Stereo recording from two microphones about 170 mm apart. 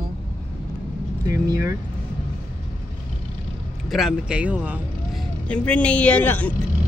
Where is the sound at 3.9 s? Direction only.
Centre (ahead or behind).